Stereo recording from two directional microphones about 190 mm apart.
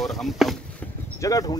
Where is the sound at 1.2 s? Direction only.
15° left (ahead or behind).